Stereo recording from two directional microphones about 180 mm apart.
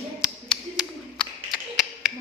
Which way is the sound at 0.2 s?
Centre (ahead or behind).